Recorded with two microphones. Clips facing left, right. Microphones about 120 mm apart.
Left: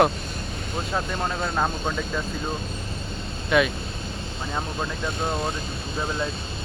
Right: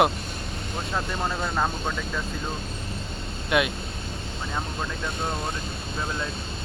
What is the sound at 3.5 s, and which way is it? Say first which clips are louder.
Speech: left 3 dB; 10° right (ahead or behind).